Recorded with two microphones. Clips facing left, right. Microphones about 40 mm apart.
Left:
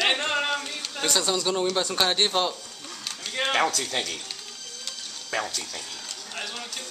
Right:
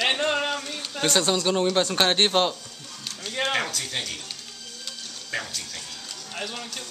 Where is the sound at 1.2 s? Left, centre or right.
Right.